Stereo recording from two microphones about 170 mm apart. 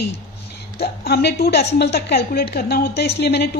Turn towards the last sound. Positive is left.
turn(degrees=80)